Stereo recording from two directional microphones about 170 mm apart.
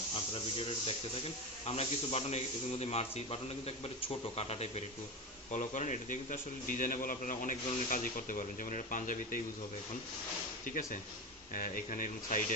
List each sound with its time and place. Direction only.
0.1 s a man's voice: 35° left (ahead or behind); by 9.4 s 50° left (ahead or behind)
10.7 s a man's voice: 50° left (ahead or behind)